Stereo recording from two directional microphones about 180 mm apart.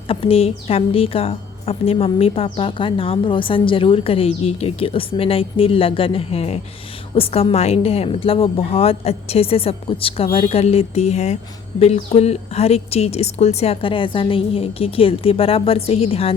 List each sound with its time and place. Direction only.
0.1 s a woman's voice: 30° left (ahead or behind)